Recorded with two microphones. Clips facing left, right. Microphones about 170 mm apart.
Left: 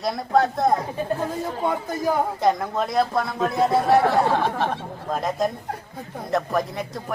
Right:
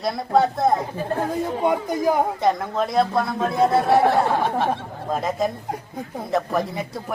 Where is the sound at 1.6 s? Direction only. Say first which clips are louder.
Right 3 dB; 15° right (ahead or behind).